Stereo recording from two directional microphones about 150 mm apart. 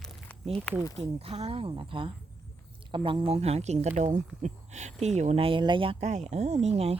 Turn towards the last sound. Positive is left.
turn(degrees=-45)  # may be behind; listen again after turning